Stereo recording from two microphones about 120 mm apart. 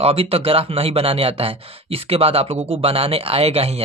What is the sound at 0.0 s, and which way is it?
Speech, 55° right (ahead or behind).